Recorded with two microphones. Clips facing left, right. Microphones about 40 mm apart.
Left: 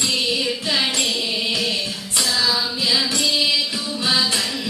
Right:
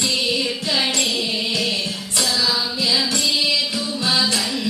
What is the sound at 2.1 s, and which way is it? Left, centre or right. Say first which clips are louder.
Music: even; centre.